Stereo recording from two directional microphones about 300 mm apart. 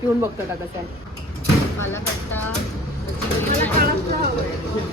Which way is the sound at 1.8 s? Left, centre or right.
Centre.